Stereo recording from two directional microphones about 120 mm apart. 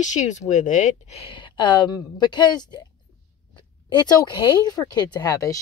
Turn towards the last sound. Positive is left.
turn(degrees=30)  # may be behind; listen again after turning